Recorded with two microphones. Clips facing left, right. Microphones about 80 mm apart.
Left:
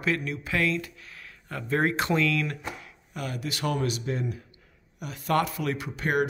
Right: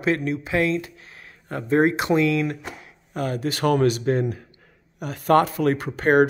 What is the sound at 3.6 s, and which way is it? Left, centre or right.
Speech, right.